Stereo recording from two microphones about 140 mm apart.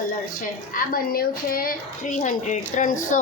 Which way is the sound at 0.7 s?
85° left.